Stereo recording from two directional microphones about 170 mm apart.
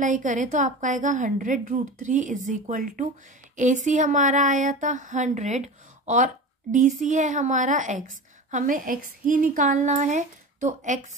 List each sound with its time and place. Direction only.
0.0 s a woman's voice: 45° right (ahead or behind)